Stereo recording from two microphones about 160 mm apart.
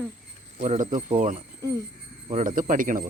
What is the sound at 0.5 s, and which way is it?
Speech, 55° right (ahead or behind).